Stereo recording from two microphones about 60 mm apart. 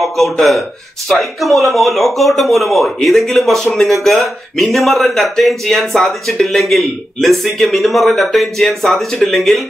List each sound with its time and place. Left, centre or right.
0.0 s speech: centre